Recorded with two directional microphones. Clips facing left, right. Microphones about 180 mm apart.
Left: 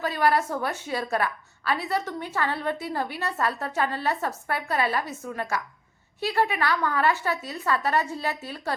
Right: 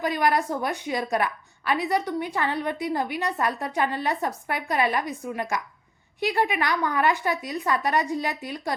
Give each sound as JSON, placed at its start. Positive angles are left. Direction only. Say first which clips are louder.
{"t": 0.0, "sound": "a woman's voice", "louder": "even", "side_deg": -15}